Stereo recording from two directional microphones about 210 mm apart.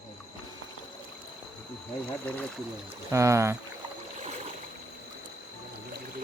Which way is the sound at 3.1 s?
15° right (ahead or behind).